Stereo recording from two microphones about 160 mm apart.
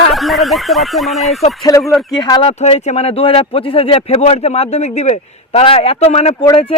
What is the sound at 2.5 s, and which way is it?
Speech, 40° left (ahead or behind).